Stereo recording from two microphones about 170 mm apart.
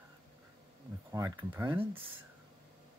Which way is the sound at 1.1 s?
20° right (ahead or behind).